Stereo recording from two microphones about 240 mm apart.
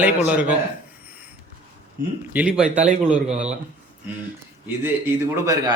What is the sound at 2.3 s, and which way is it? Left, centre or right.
Speech, centre.